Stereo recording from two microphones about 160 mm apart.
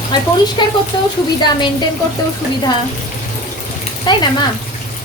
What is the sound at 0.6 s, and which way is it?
Speech, 25° left (ahead or behind).